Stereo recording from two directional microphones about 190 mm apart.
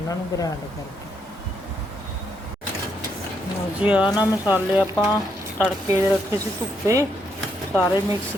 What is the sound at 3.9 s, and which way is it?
Speech, 5° right (ahead or behind).